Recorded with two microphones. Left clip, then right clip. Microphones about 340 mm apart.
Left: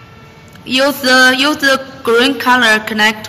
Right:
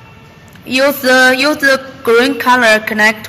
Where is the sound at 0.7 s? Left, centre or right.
Centre.